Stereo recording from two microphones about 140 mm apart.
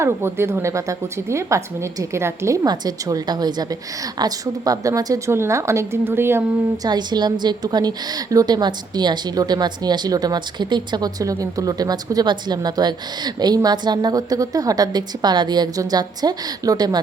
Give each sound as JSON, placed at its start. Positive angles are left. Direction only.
{"t": 0.0, "sound": "a woman's voice", "side_deg": -15}
{"t": 6.8, "sound": "a woman's voice", "side_deg": -30}